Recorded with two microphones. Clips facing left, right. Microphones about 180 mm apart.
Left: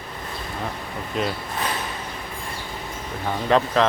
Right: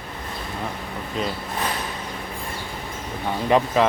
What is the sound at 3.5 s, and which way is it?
Speech, 10° right (ahead or behind).